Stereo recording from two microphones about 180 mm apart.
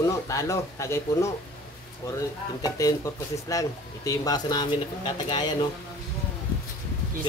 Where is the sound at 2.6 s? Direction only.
20° left (ahead or behind).